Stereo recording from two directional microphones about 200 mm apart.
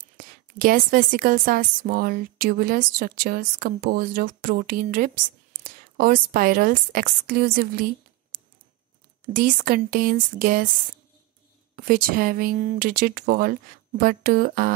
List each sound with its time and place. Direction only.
0.0 s a woman's voice: 45° right (ahead or behind)
8.3 s a sound: 50° right (ahead or behind)
9.3 s a woman's voice: 45° right (ahead or behind)
11.7 s a woman's voice: 45° right (ahead or behind)